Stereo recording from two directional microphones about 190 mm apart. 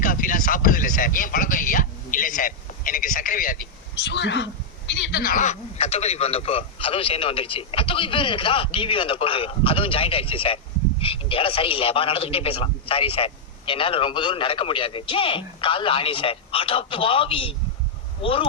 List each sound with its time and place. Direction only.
0.0 s a sound: 45° left (ahead or behind)
3.9 s speech: 65° left (ahead or behind)
5.2 s a man's voice: 45° left (ahead or behind); by 18.4 s 30° left (ahead or behind)